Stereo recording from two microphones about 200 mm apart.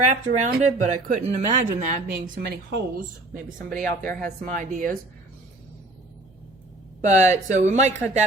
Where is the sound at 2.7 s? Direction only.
45° right (ahead or behind).